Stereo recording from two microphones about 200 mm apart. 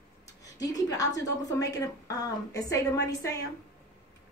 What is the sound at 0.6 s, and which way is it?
A woman's voice, 20° left (ahead or behind).